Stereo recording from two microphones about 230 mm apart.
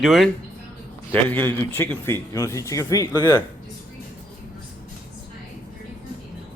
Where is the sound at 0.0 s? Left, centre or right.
Centre.